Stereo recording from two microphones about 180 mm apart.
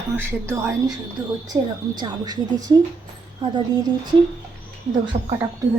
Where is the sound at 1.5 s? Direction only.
25° right (ahead or behind).